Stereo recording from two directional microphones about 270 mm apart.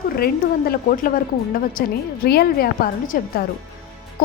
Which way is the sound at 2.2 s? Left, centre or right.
Left.